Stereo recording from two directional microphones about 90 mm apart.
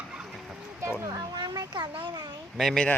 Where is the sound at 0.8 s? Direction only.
30° right (ahead or behind).